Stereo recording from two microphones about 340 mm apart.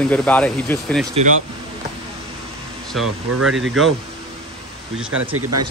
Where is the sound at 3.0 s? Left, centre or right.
Right.